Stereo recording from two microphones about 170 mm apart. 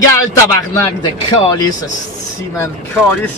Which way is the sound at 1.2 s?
25° left (ahead or behind).